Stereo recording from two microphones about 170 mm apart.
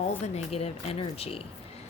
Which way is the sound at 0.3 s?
35° left (ahead or behind).